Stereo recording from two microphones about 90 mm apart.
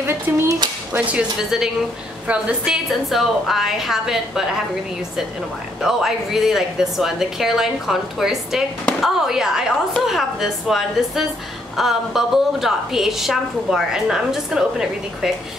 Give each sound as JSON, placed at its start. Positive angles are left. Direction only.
{"t": 0.0, "sound": "speech", "side_deg": -30}
{"t": 0.9, "sound": "speech", "side_deg": -15}
{"t": 2.2, "sound": "a woman's voice", "side_deg": -10}
{"t": 5.8, "sound": "a woman's voice", "side_deg": -5}